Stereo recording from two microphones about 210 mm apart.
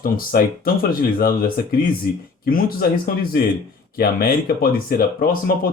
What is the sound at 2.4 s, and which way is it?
Speech, 45° left (ahead or behind).